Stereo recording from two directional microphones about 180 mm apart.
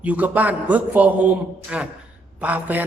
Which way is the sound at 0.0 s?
10° right (ahead or behind).